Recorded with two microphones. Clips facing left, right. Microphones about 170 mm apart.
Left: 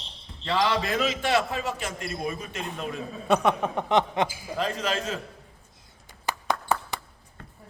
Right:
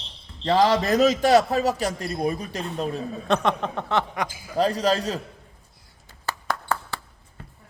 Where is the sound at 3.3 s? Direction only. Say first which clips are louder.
Left 1 dB; 5° left (ahead or behind).